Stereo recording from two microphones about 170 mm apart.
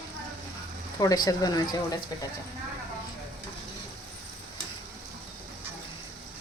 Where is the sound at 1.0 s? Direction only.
25° left (ahead or behind).